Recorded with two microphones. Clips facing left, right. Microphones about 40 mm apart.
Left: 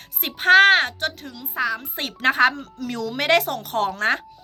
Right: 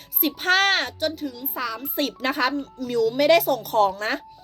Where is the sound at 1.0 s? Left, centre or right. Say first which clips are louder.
Right 2 dB; left.